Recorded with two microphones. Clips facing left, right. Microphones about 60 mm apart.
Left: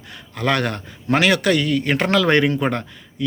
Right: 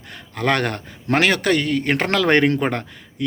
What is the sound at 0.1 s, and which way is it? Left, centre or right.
Speech, right.